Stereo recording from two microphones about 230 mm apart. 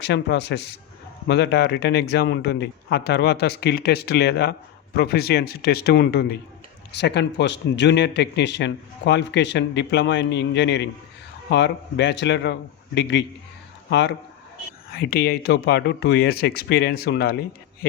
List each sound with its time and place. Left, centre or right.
0.0 s a man's voice: left